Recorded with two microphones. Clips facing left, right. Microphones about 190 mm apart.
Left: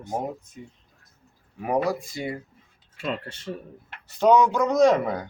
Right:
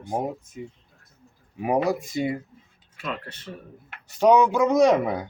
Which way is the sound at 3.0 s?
30° left (ahead or behind).